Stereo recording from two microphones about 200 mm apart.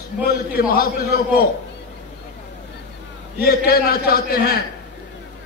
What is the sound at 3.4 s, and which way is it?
A man's voice, 50° left (ahead or behind).